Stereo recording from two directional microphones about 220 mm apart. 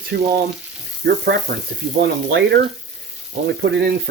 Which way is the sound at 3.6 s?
50° right (ahead or behind).